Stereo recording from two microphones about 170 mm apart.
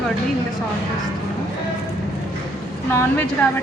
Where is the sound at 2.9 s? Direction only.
15° left (ahead or behind).